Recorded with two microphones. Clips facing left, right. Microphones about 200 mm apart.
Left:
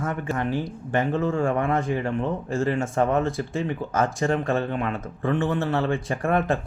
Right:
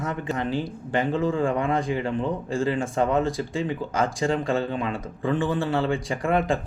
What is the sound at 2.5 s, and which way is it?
Speech, 30° right (ahead or behind).